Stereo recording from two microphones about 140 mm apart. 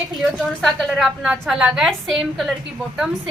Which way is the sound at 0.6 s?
Centre (ahead or behind).